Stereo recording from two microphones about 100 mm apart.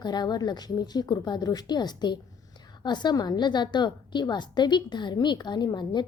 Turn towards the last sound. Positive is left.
turn(degrees=45)  # may be behind; listen again after turning